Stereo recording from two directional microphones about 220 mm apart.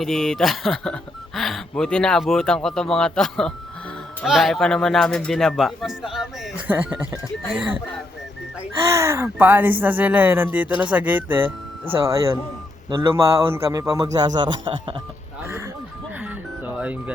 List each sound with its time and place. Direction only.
0.0 s a man's voice: centre (ahead or behind)
8.9 s a man's voice: 15° right (ahead or behind)
16.2 s music: 5° right (ahead or behind)